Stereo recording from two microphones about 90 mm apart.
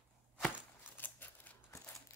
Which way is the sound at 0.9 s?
20° left (ahead or behind).